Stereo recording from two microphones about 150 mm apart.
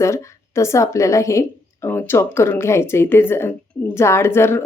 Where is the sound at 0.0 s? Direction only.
20° left (ahead or behind).